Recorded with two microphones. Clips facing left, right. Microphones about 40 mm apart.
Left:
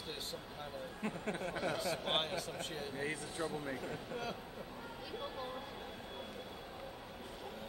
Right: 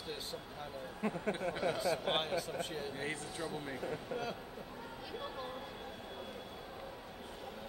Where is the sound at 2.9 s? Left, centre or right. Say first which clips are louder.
Even; right.